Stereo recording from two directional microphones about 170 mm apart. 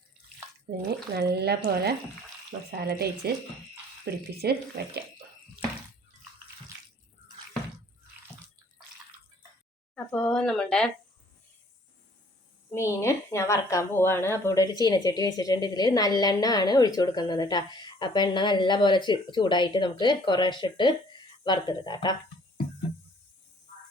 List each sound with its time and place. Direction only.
0.7 s speech: 65° right (ahead or behind)
2.8 s speech: 70° right (ahead or behind)
9.9 s speech: 5° left (ahead or behind)
12.7 s a woman's voice: 15° left (ahead or behind)